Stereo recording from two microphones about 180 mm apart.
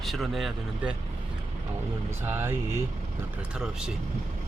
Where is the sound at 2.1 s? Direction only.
10° right (ahead or behind).